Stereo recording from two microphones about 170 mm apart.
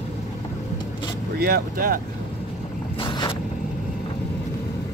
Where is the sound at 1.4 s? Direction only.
60° right (ahead or behind).